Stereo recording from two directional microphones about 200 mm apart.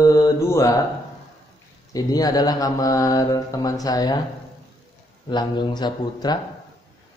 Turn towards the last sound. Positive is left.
turn(degrees=20)  # may be behind; listen again after turning